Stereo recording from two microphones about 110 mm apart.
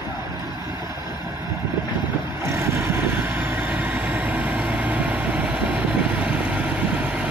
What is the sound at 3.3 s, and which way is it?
Vehicle, 15° right (ahead or behind).